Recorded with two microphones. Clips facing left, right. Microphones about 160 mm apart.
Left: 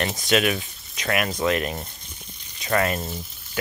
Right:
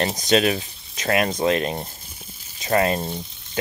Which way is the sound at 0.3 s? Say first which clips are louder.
Right 2 dB; 35° right (ahead or behind).